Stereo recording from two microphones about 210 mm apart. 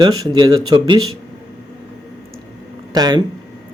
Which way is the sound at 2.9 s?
20° right (ahead or behind).